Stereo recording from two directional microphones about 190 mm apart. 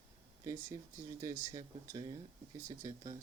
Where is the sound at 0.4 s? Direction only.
15° right (ahead or behind).